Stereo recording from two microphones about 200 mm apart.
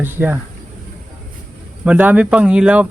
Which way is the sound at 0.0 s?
10° right (ahead or behind).